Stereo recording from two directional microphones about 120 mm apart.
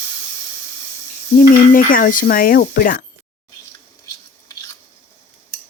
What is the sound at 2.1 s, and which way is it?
Speech, 90° left.